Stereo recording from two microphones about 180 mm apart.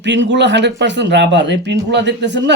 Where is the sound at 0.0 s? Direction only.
75° right (ahead or behind).